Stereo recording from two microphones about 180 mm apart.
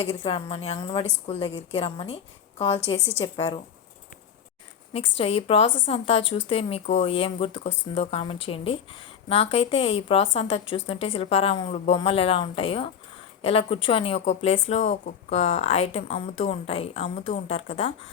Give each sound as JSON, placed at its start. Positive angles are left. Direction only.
{"t": 0.1, "sound": "a woman's voice", "side_deg": 30}
{"t": 4.9, "sound": "a woman's voice", "side_deg": 35}